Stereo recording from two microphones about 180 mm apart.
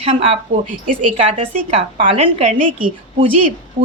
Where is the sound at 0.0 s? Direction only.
35° right (ahead or behind).